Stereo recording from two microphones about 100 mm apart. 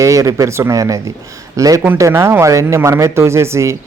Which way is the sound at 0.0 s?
35° right (ahead or behind).